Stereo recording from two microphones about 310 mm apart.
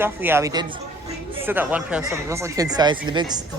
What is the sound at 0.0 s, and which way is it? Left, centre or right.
A man's voice, centre.